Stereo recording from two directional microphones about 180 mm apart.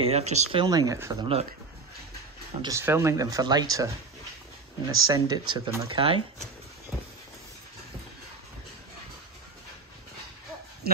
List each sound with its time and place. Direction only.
0.0 s speech: 35° right (ahead or behind); by 1.1 s 15° right (ahead or behind)
1.2 s speech: 35° right (ahead or behind)
2.6 s speech: 15° right (ahead or behind)
5.0 s speech: 20° right (ahead or behind)